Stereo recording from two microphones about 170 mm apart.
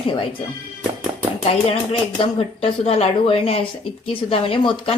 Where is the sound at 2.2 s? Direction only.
35° left (ahead or behind).